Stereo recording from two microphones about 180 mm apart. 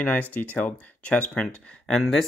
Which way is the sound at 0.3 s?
10° left (ahead or behind).